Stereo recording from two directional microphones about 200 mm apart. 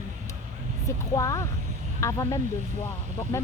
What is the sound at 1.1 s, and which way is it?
Speech, 15° left (ahead or behind).